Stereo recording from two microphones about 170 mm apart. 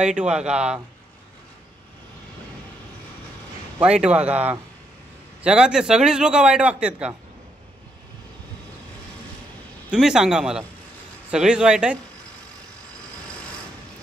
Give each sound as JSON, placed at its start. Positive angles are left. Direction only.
{"t": 0.0, "sound": "a man's voice", "side_deg": -5}
{"t": 3.8, "sound": "a man's voice", "side_deg": -5}
{"t": 9.8, "sound": "a man's voice", "side_deg": -5}